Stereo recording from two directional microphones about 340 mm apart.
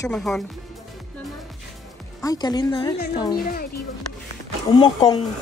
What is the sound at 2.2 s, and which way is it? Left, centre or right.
Speech, centre.